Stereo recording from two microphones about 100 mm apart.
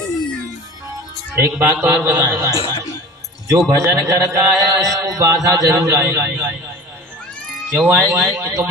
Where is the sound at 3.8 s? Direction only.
35° right (ahead or behind).